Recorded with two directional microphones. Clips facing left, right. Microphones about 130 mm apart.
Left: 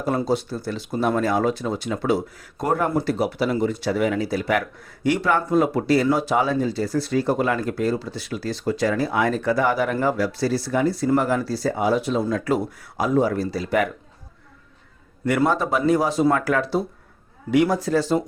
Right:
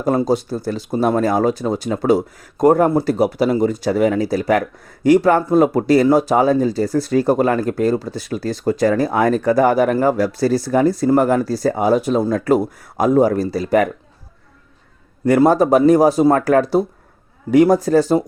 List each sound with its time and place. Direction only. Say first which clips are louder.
0.0 s speech: right 5 dB; 40° right (ahead or behind)
15.2 s speech: right 8 dB; 35° right (ahead or behind)